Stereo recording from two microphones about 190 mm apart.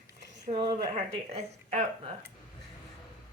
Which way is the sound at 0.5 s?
25° right (ahead or behind).